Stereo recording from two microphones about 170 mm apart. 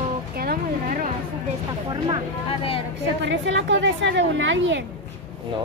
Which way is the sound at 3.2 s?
90° right.